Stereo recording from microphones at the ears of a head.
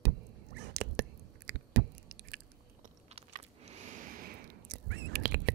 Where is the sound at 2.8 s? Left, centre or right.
Right.